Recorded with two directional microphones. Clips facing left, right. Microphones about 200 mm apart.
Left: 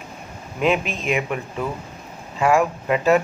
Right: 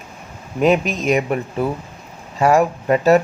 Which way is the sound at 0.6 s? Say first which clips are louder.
Right 5 dB; 40° right (ahead or behind).